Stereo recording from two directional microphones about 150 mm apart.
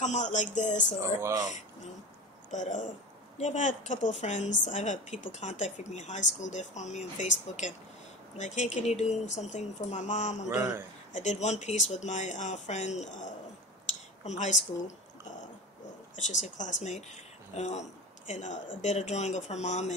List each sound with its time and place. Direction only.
0.0 s a woman's voice: 55° left (ahead or behind)
1.2 s speech: 25° right (ahead or behind)
2.5 s a woman's voice: 55° left (ahead or behind)
10.5 s speech: 5° right (ahead or behind)
11.1 s a woman's voice: 50° left (ahead or behind)
13.8 s a sound: 50° left (ahead or behind)
16.2 s a woman's voice: 55° left (ahead or behind)